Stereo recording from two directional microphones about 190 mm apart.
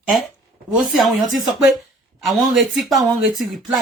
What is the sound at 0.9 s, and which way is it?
Speech, centre (ahead or behind).